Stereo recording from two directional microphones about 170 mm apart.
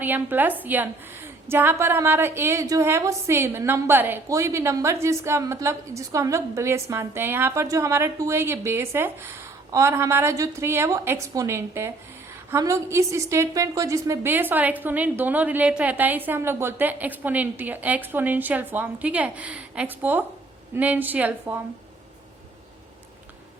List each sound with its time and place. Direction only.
0.0 s a woman's voice: 10° right (ahead or behind)